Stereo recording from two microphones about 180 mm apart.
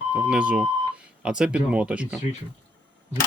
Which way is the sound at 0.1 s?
5° right (ahead or behind).